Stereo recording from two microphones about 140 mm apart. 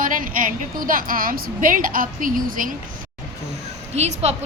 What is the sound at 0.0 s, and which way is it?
A woman's voice, 75° right (ahead or behind).